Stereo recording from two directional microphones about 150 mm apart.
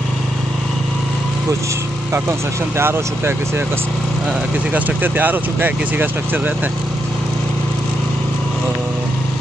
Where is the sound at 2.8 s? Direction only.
15° right (ahead or behind).